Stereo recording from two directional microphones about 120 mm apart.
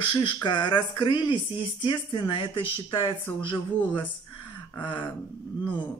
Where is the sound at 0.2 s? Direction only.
40° left (ahead or behind).